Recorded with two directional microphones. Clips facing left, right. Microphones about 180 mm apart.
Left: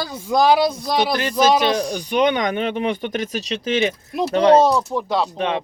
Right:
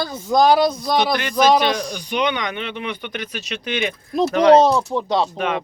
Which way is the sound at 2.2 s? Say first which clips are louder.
Left 5 dB; 45° left (ahead or behind).